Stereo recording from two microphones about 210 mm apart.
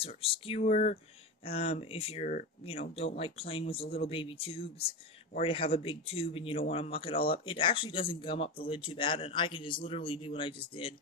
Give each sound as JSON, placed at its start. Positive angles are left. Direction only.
{"t": 0.0, "sound": "speech", "side_deg": 25}